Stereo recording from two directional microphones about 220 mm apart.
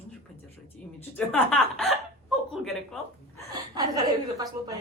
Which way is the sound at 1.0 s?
10° left (ahead or behind).